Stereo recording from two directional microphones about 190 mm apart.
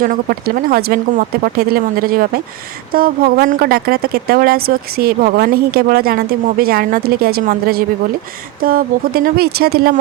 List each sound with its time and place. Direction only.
0.0 s a woman's voice: 50° right (ahead or behind)